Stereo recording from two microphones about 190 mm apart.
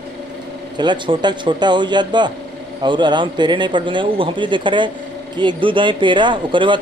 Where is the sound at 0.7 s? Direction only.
25° right (ahead or behind).